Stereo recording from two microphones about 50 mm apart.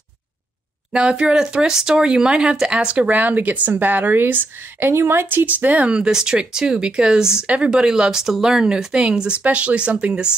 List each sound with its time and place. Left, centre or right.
0.9 s speech: centre